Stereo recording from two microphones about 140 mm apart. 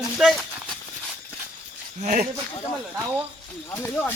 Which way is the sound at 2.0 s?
60° right (ahead or behind).